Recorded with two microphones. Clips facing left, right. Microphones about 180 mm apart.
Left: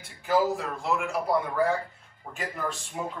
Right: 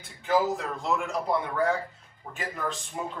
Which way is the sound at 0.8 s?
Centre (ahead or behind).